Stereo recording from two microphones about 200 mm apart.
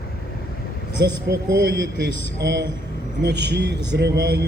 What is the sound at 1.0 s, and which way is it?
Speech, 55° right (ahead or behind).